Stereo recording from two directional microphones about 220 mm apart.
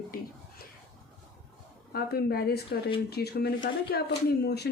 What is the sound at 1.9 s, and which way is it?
Speech, 45° left (ahead or behind).